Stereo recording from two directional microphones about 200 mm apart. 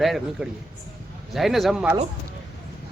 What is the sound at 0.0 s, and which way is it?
Speech, centre (ahead or behind).